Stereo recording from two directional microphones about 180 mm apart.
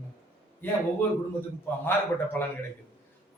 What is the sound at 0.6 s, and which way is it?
Speech, 10° left (ahead or behind).